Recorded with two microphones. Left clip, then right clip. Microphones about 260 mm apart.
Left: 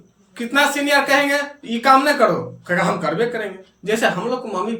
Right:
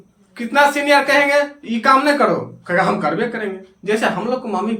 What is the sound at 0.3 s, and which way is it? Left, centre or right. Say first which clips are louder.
Speech: right 3 dB; centre.